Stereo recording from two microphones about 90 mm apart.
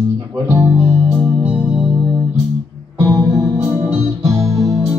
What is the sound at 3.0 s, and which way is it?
Music, 40° right (ahead or behind).